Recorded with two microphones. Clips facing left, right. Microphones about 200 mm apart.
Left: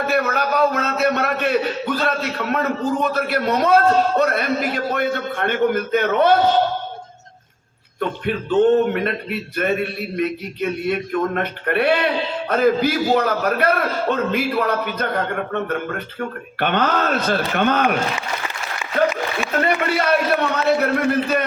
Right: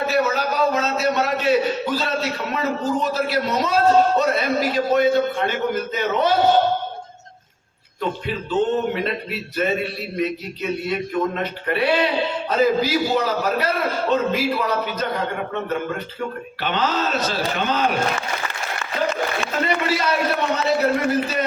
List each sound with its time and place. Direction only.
0.1 s a man's voice: 60° left (ahead or behind)
8.2 s a man's voice: 60° left (ahead or behind)
18.8 s applause: 10° left (ahead or behind)
19.6 s a sound: 55° left (ahead or behind)